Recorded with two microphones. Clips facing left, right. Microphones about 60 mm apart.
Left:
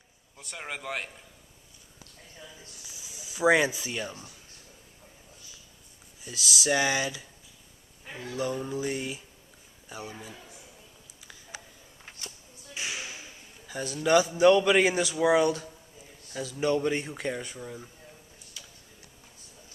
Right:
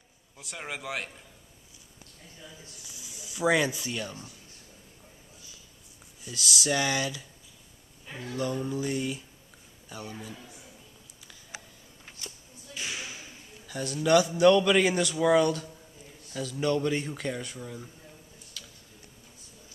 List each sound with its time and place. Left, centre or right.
0.4 s a man's voice: centre
3.2 s a man's voice: centre
6.2 s a man's voice: centre
12.7 s a sound: centre
13.7 s a man's voice: centre
18.6 s tick-tock: centre